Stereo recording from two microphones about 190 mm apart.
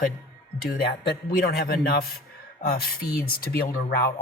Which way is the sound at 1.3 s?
50° left (ahead or behind).